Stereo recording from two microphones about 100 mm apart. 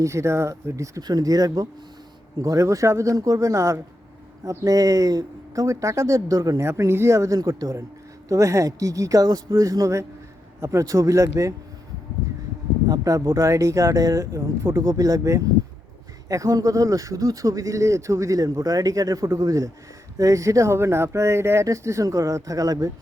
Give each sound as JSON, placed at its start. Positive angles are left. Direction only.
{"t": 0.0, "sound": "speech", "side_deg": -30}
{"t": 6.7, "sound": "speech", "side_deg": -25}
{"t": 12.9, "sound": "speech", "side_deg": -35}